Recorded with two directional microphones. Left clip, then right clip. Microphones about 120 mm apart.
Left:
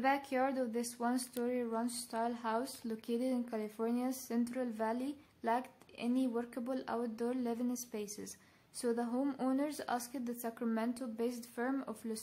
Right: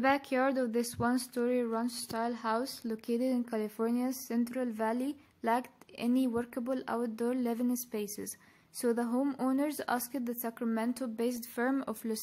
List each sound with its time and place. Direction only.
0.0 s speech: 30° right (ahead or behind)
9.2 s speech: 15° right (ahead or behind)
9.5 s speech: 35° right (ahead or behind)
10.6 s speech: 30° right (ahead or behind)